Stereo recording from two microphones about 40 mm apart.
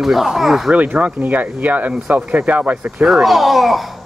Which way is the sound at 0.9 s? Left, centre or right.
Right.